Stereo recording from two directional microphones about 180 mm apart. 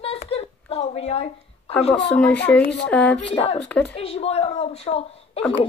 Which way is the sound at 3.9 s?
35° left (ahead or behind).